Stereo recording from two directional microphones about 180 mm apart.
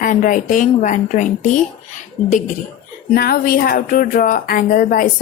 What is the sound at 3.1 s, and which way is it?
Speech, 55° left (ahead or behind).